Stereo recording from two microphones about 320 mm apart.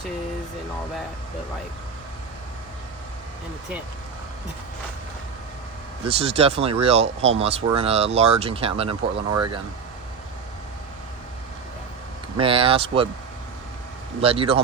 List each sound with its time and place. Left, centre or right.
6.1 s speech: centre
12.4 s speech: centre
14.2 s speech: centre